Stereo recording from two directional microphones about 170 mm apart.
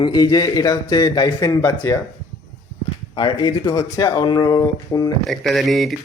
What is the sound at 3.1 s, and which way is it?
A man's voice, 25° left (ahead or behind).